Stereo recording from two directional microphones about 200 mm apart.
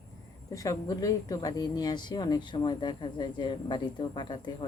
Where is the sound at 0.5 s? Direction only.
15° left (ahead or behind).